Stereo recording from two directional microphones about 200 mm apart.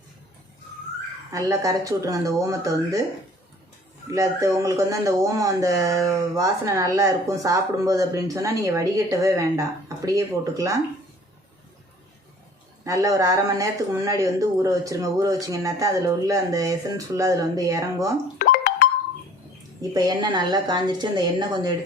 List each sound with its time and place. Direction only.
1.3 s speech: 15° right (ahead or behind)
4.1 s speech: 15° right (ahead or behind)
12.8 s speech: 15° right (ahead or behind)
18.3 s music: 45° left (ahead or behind)
19.9 s a woman's voice: 20° right (ahead or behind)